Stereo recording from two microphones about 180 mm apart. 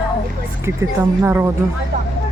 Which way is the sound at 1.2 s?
15° right (ahead or behind).